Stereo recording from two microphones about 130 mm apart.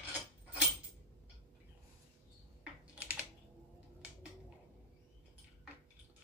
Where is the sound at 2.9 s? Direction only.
10° right (ahead or behind).